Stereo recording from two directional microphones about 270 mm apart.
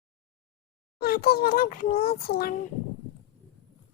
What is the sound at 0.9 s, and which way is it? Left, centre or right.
A child's voice, left.